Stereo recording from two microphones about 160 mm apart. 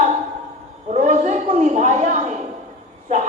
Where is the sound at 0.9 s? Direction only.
45° right (ahead or behind).